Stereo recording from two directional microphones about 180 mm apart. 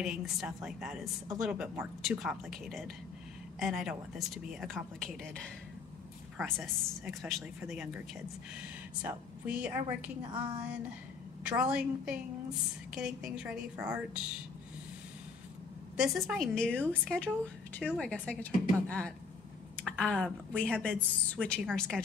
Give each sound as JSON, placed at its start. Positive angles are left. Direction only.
{"t": 0.0, "sound": "a woman's voice", "side_deg": 0}
{"t": 9.0, "sound": "a woman's voice", "side_deg": -5}
{"t": 10.2, "sound": "a woman's voice", "side_deg": -25}
{"t": 11.4, "sound": "a woman's voice", "side_deg": -5}
{"t": 16.0, "sound": "a woman's voice", "side_deg": 0}